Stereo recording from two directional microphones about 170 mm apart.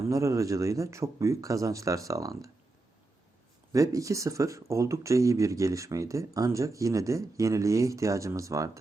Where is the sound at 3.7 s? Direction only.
20° right (ahead or behind).